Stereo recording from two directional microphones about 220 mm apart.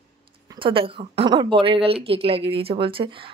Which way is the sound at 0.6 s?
25° right (ahead or behind).